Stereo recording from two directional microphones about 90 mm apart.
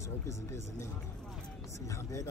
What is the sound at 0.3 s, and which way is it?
Speech, 35° left (ahead or behind).